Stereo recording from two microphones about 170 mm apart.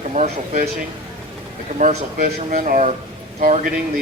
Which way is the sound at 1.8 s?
50° right (ahead or behind).